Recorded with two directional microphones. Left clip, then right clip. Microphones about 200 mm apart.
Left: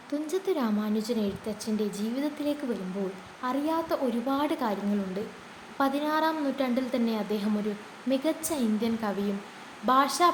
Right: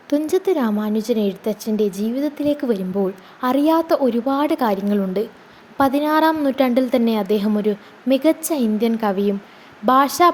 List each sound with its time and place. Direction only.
0.1 s a woman's voice: 40° right (ahead or behind)